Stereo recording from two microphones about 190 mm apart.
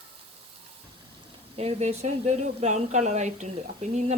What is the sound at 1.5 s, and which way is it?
Speech, 35° right (ahead or behind).